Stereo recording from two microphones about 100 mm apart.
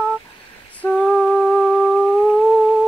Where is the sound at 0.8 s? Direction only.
10° left (ahead or behind).